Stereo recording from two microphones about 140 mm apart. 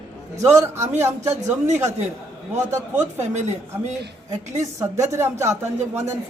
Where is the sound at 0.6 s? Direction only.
20° right (ahead or behind).